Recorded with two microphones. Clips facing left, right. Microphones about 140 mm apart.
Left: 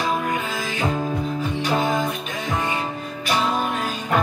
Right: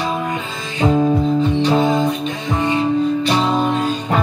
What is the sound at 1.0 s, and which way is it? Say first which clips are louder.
Music: right 9 dB; 25° right (ahead or behind).